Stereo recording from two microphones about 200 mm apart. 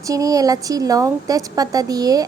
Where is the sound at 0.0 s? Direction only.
15° right (ahead or behind).